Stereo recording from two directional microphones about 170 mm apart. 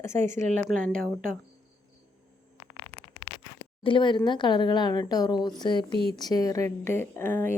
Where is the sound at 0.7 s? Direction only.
5° right (ahead or behind).